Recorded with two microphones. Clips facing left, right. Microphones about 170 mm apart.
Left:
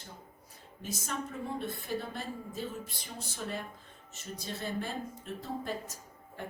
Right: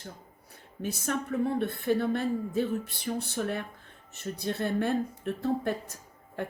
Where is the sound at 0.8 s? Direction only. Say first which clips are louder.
Right 6 dB; 65° right (ahead or behind).